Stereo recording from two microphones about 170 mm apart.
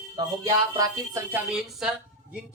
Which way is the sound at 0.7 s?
20° right (ahead or behind).